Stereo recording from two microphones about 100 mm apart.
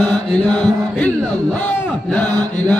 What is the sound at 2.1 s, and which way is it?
Chant, 20° left (ahead or behind).